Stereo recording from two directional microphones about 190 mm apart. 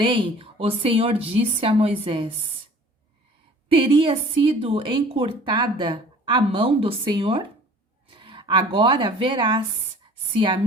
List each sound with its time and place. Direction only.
0.0 s a woman's voice: 25° right (ahead or behind)
3.7 s a woman's voice: 25° right (ahead or behind)